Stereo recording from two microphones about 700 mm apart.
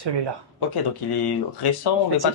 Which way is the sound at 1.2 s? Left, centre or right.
Left.